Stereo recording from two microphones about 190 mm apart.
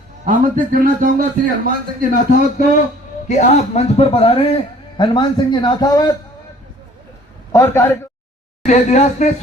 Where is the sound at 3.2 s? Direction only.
40° left (ahead or behind); by 6.1 s 20° left (ahead or behind).